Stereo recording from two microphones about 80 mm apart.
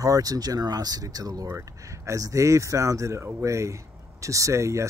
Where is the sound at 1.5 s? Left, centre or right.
Right.